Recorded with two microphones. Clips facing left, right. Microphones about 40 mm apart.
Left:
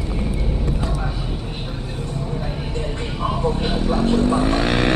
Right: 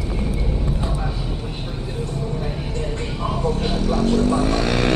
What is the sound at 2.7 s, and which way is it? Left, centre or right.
Vehicle, centre.